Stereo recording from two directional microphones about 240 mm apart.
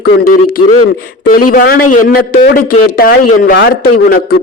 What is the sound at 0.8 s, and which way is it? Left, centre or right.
A man's voice, left.